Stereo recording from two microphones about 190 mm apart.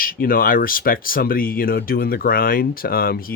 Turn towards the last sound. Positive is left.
turn(degrees=50)  # may be behind; listen again after turning